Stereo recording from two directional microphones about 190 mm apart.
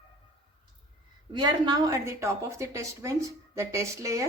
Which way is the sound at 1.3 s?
20° right (ahead or behind).